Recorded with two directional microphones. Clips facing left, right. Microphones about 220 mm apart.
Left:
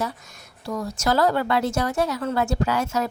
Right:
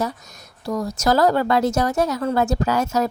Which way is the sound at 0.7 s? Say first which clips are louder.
Right 4 dB; 40° right (ahead or behind).